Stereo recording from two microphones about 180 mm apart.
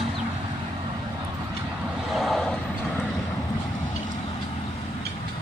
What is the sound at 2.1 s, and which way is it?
Vehicle, centre (ahead or behind).